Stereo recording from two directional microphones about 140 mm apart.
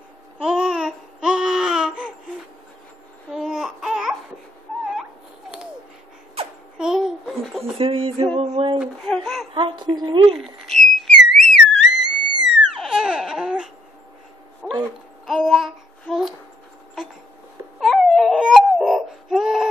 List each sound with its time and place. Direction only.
0.4 s babbling: 5° right (ahead or behind)
3.3 s baby cry: 5° right (ahead or behind)
6.8 s babbling: 5° right (ahead or behind)
7.7 s music: 40° right (ahead or behind)
8.4 s a sound: 40° right (ahead or behind)
9.0 s a sound: 5° left (ahead or behind)
9.5 s a woman's voice: 35° right (ahead or behind)
10.3 s whistle: centre (ahead or behind)
14.6 s owl: 5° right (ahead or behind)
15.2 s child singing: centre (ahead or behind)
17.7 s crying: centre (ahead or behind)